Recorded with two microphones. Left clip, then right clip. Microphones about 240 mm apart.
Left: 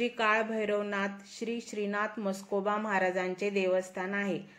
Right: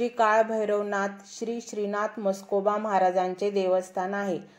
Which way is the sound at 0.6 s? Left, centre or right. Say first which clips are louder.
Right 5 dB; centre.